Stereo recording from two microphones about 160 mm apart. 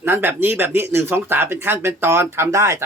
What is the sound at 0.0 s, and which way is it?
A man's voice, 15° right (ahead or behind).